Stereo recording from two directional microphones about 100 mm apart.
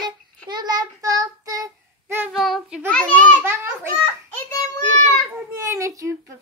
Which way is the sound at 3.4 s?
25° right (ahead or behind).